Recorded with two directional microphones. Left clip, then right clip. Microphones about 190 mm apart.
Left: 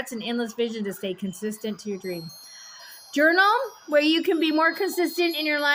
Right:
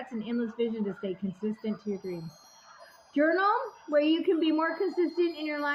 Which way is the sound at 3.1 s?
45° left (ahead or behind).